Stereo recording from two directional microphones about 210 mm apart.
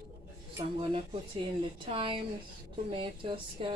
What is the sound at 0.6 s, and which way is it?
Speech, 25° right (ahead or behind).